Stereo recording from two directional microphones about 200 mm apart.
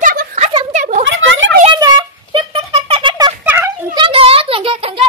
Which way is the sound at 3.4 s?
10° right (ahead or behind).